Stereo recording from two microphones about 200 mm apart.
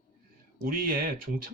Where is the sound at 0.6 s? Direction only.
45° right (ahead or behind).